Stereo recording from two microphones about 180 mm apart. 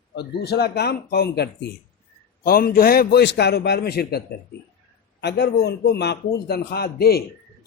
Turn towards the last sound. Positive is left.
turn(degrees=60)  # may be behind; listen again after turning